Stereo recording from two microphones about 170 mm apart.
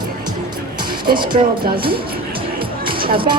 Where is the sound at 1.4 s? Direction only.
40° right (ahead or behind).